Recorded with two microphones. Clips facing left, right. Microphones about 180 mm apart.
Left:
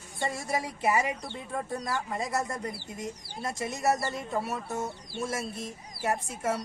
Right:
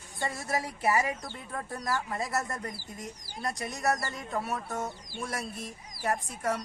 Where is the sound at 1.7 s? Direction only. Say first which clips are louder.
Right 2 dB; 20° left (ahead or behind).